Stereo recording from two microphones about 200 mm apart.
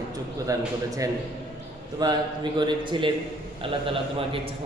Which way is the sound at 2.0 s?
20° right (ahead or behind).